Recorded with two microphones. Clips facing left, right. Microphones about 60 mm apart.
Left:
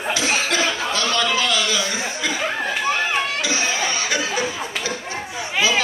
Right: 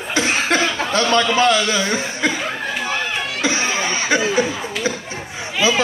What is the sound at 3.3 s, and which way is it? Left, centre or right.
Chuckle, right.